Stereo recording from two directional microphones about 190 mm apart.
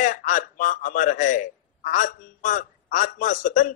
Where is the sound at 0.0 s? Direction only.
45° left (ahead or behind).